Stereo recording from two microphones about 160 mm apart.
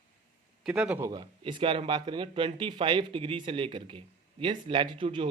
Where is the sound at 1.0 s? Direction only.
30° right (ahead or behind).